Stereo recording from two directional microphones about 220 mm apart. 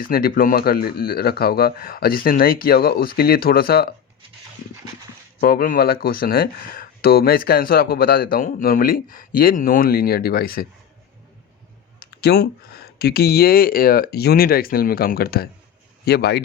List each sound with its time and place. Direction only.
0.0 s speech: 40° left (ahead or behind)
5.4 s speech: 40° left (ahead or behind)
12.2 s speech: 45° left (ahead or behind)